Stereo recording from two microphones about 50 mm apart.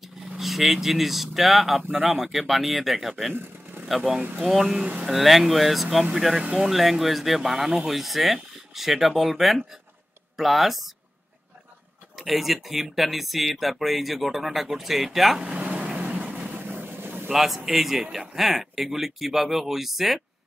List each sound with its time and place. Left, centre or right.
0.0 s speech: centre
12.2 s speech: centre
15.4 s a sound: right
15.9 s vehicle: right
16.8 s vehicle: right
17.3 s speech: centre